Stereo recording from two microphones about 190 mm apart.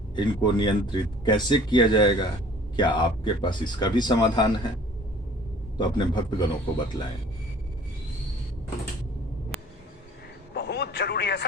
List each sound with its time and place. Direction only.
0.2 s speech: 25° left (ahead or behind)
5.7 s speech: 25° left (ahead or behind)
10.5 s a sound: 60° left (ahead or behind)